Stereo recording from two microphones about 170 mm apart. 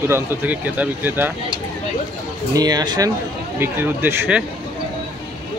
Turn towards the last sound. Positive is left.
turn(degrees=-10)  # may be behind; listen again after turning